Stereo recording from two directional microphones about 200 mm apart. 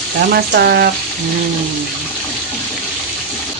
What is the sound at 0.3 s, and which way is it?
Speech, 50° right (ahead or behind).